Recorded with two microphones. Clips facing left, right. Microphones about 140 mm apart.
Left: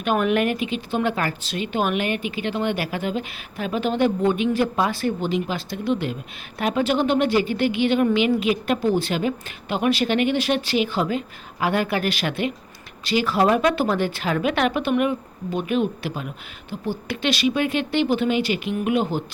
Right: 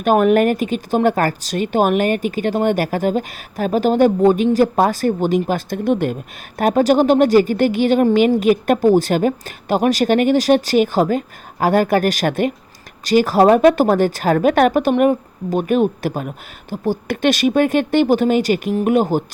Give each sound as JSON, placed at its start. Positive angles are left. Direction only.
{"t": 0.0, "sound": "a woman's voice", "side_deg": -40}